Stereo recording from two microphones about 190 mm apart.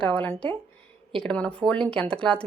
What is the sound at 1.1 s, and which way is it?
A woman's voice, 5° left (ahead or behind).